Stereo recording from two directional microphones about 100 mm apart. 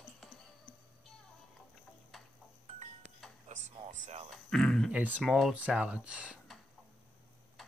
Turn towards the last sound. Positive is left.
turn(degrees=-15)  # may be behind; listen again after turning